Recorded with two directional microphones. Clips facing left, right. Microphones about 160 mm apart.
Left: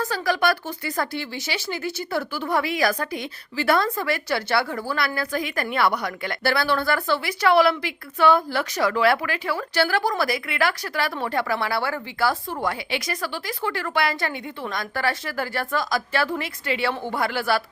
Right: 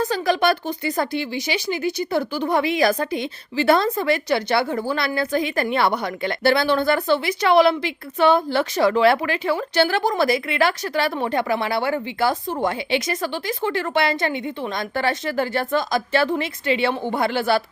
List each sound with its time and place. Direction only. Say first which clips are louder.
0.0 s speech: right 3 dB; 20° right (ahead or behind)